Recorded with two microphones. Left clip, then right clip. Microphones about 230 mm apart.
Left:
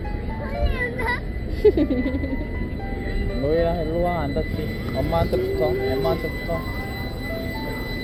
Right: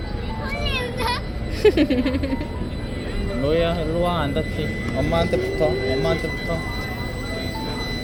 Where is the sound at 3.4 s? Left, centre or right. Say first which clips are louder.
Right 1 dB; right.